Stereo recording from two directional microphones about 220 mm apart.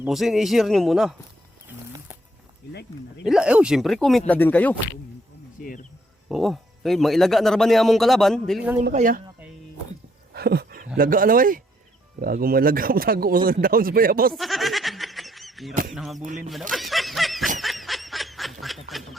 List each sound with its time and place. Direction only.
0.0 s a man's voice: centre (ahead or behind)
1.6 s music: 10° right (ahead or behind)
3.2 s a man's voice: 5° right (ahead or behind)
5.6 s speech: 40° left (ahead or behind)
6.2 s a man's voice: centre (ahead or behind)
8.8 s speech: 35° right (ahead or behind)
10.3 s speech: 45° right (ahead or behind)
14.3 s goat: centre (ahead or behind)
15.9 s a man's voice: centre (ahead or behind)
16.2 s speech: 35° right (ahead or behind)
16.5 s honk: centre (ahead or behind)
17.6 s a sound: centre (ahead or behind)
18.6 s quack: centre (ahead or behind)